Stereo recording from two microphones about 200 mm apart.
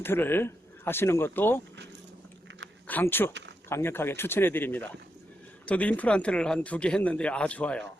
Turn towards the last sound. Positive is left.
turn(degrees=5)  # may be behind; listen again after turning